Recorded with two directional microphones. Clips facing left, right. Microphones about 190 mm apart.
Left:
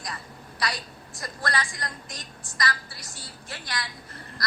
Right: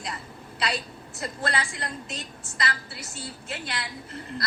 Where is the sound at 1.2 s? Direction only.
25° right (ahead or behind).